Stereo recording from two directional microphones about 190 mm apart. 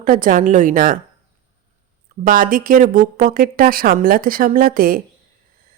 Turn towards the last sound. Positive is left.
turn(degrees=-50)  # may be behind; listen again after turning